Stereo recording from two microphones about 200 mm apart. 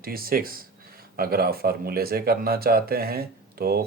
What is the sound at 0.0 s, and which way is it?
Speech, 50° right (ahead or behind).